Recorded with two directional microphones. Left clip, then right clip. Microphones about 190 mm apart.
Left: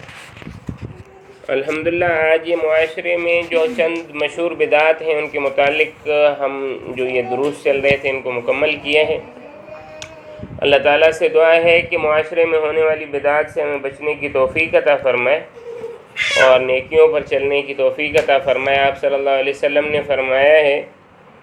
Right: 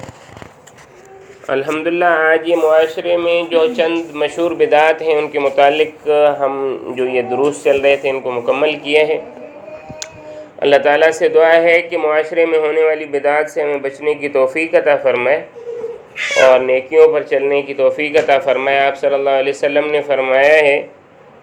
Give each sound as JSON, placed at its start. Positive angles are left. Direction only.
{"t": 1.6, "sound": "a man's voice", "side_deg": 10}
{"t": 2.3, "sound": "speech", "side_deg": -20}
{"t": 2.6, "sound": "speech", "side_deg": 10}
{"t": 3.1, "sound": "speech", "side_deg": -20}
{"t": 10.6, "sound": "speech", "side_deg": -20}
{"t": 16.4, "sound": "speech", "side_deg": -20}